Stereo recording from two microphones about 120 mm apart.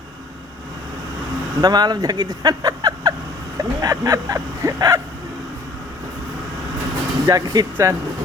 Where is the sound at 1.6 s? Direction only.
35° right (ahead or behind).